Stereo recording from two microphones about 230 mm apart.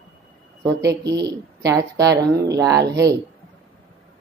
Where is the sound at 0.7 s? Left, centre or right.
Centre.